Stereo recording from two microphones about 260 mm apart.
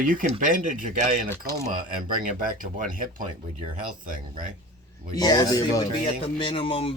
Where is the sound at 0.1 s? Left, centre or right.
Right.